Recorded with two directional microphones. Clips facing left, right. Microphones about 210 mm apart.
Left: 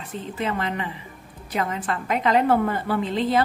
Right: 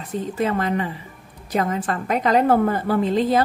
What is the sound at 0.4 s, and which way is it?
A woman's voice, 40° right (ahead or behind).